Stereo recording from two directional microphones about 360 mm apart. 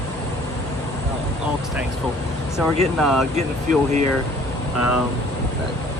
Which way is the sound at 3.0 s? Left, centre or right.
Centre.